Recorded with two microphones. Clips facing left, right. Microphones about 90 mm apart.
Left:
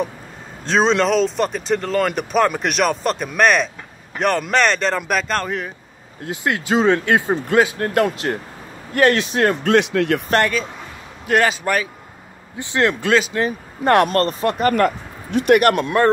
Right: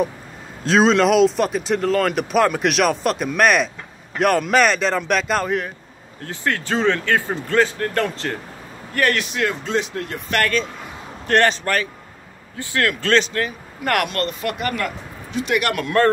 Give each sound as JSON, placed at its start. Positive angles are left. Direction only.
{"t": 0.7, "sound": "speech", "side_deg": 0}
{"t": 6.2, "sound": "speech", "side_deg": 15}
{"t": 8.9, "sound": "speech", "side_deg": 25}
{"t": 9.6, "sound": "speech", "side_deg": 65}
{"t": 11.2, "sound": "speech", "side_deg": 5}
{"t": 12.5, "sound": "speech", "side_deg": 20}
{"t": 13.1, "sound": "speech", "side_deg": 10}
{"t": 14.0, "sound": "speech", "side_deg": 35}
{"t": 15.7, "sound": "speech", "side_deg": 20}